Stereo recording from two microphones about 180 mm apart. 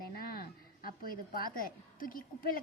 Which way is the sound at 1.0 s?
55° left (ahead or behind).